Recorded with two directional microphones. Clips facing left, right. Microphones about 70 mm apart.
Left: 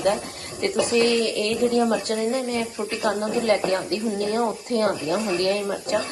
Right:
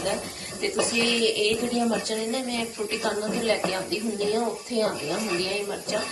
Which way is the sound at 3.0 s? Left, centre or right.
Left.